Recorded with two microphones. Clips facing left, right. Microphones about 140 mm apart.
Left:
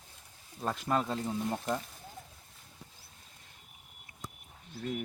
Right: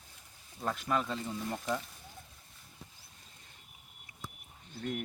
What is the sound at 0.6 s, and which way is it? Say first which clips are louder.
Speech: left 2 dB; 20° left (ahead or behind).